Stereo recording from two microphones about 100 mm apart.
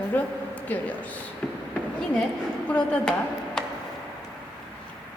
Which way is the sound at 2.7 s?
10° left (ahead or behind).